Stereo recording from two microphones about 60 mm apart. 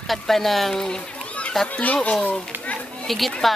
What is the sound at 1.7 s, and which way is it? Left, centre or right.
Speech, left.